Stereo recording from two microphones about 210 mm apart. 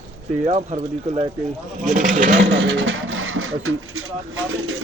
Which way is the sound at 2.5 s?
65° right (ahead or behind).